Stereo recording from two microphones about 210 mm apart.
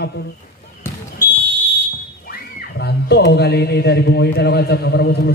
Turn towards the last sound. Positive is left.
turn(degrees=55)  # may be behind; listen again after turning